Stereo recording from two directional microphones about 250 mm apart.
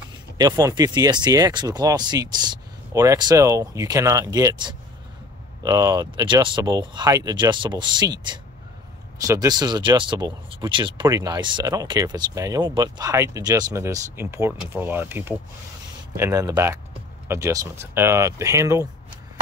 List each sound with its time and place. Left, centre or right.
0.4 s speech: centre